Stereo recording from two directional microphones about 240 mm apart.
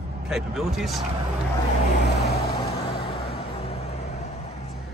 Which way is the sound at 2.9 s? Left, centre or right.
Left.